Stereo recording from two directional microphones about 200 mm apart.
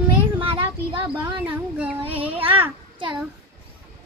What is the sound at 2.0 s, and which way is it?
Speech, 25° right (ahead or behind).